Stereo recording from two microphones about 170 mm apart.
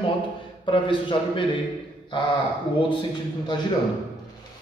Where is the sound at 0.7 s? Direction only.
30° left (ahead or behind).